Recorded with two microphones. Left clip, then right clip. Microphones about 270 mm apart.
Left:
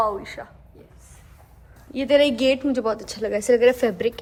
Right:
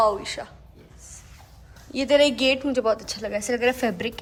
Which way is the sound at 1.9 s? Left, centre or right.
Centre.